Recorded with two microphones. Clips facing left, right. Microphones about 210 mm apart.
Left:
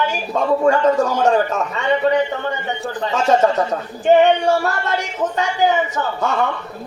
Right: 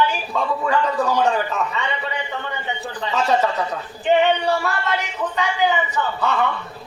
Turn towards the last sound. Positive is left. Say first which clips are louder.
# left 1 dB
turn(degrees=45)  # may be behind; listen again after turning